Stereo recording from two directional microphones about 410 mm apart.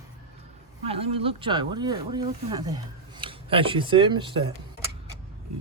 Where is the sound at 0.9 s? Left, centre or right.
Centre.